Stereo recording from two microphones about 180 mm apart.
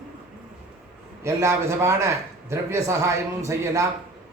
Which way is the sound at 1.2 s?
15° right (ahead or behind).